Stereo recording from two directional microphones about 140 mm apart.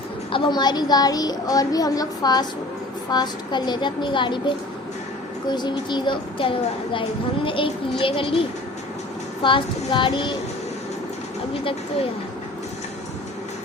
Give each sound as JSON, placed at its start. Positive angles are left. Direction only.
{"t": 0.3, "sound": "speech", "side_deg": 35}